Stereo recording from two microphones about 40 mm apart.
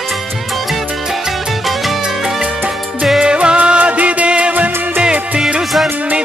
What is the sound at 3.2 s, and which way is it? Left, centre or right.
Music, right.